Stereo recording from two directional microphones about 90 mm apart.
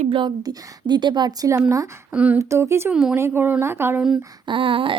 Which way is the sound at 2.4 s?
30° right (ahead or behind).